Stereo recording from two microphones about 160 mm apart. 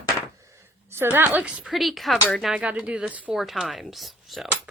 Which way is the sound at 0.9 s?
15° right (ahead or behind).